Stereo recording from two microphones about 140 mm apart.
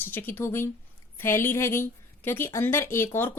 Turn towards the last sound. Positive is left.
turn(degrees=15)  # may be behind; listen again after turning